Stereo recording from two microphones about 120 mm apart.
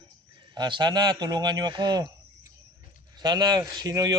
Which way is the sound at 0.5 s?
40° right (ahead or behind).